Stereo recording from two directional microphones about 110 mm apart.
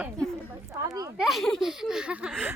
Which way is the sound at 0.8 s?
35° right (ahead or behind).